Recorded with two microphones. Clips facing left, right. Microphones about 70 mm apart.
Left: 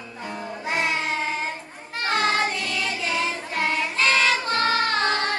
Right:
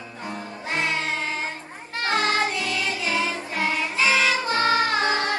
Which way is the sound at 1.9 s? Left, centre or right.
Centre.